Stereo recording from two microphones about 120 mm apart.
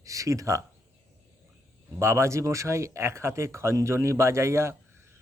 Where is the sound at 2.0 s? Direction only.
20° right (ahead or behind).